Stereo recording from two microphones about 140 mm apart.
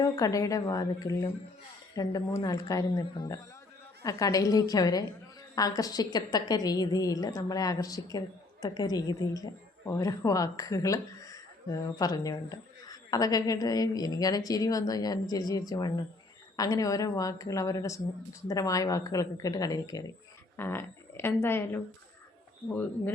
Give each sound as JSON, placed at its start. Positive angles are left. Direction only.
{"t": 0.0, "sound": "a woman's voice", "side_deg": 25}